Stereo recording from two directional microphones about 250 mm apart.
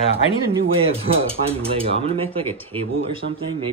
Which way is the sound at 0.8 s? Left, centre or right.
Right.